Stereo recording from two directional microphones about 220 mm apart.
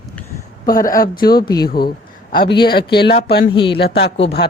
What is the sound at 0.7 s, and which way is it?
A man's voice, 40° left (ahead or behind).